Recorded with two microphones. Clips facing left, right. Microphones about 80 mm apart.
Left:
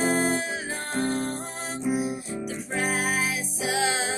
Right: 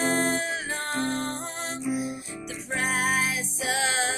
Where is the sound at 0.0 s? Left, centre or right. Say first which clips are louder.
Left 1 dB; centre.